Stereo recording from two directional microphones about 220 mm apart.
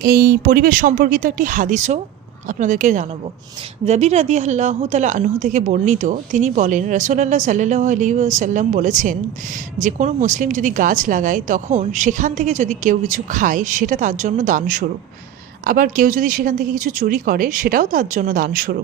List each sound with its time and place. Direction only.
0.0 s a woman's voice: 45° right (ahead or behind)